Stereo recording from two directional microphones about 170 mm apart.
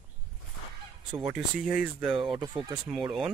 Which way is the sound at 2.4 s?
25° right (ahead or behind).